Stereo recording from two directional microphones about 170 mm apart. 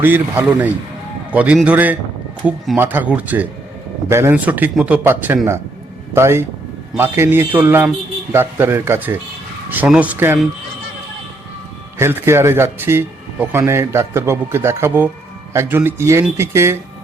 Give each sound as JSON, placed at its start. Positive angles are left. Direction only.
{"t": 0.0, "sound": "speech", "side_deg": -10}
{"t": 5.0, "sound": "speech", "side_deg": -15}
{"t": 11.9, "sound": "speech", "side_deg": -15}